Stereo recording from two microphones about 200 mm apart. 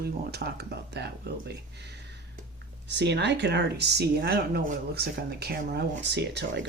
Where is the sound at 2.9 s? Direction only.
60° right (ahead or behind).